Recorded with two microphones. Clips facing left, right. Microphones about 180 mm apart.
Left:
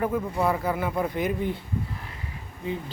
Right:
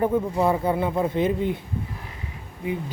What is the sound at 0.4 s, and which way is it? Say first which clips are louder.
Speech: right 4 dB; 25° right (ahead or behind).